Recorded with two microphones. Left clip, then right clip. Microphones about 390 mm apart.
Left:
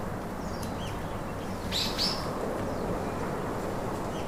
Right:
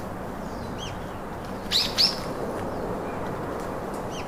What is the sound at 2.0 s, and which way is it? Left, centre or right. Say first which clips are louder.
Bird: right 6 dB; right.